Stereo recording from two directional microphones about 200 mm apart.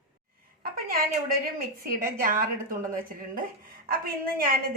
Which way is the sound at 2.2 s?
45° right (ahead or behind).